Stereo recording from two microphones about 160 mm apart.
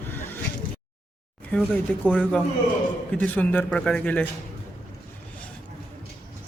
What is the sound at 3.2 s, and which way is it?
A man's voice, 10° left (ahead or behind).